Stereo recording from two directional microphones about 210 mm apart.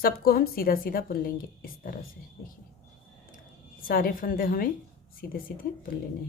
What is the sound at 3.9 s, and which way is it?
A woman's voice, 45° left (ahead or behind).